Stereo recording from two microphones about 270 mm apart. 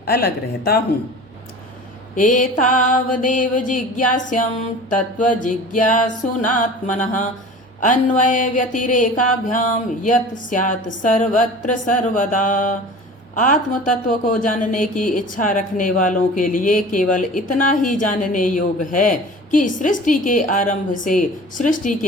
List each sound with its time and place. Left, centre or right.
0.0 s a woman's voice: left
2.1 s speech: left